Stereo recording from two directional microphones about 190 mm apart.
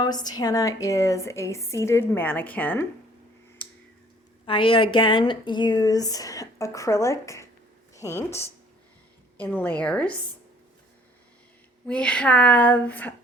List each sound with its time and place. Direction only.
0.0 s speech: 20° left (ahead or behind)
3.6 s a sound: 5° left (ahead or behind)
4.4 s speech: 25° left (ahead or behind)
9.6 s speech: 5° left (ahead or behind)
11.9 s speech: 5° left (ahead or behind)